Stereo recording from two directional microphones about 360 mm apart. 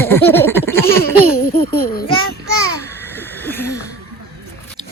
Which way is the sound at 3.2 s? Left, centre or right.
Centre.